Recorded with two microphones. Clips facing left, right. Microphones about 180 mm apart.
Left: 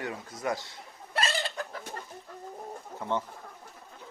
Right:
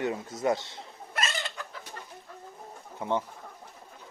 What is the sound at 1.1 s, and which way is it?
Chicken, 35° left (ahead or behind).